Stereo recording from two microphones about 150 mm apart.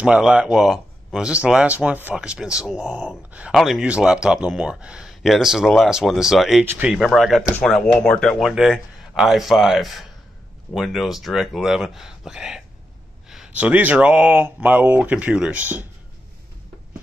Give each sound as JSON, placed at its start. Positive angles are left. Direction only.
{"t": 0.0, "sound": "speech", "side_deg": -10}
{"t": 6.6, "sound": "speech", "side_deg": -10}